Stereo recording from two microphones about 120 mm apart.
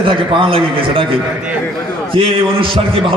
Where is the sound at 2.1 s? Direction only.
50° right (ahead or behind).